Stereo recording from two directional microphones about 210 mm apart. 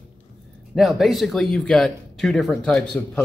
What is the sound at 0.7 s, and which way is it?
Speech, centre (ahead or behind).